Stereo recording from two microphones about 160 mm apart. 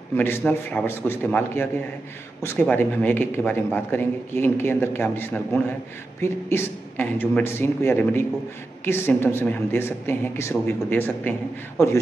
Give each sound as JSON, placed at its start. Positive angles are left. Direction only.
{"t": 0.1, "sound": "speech", "side_deg": 15}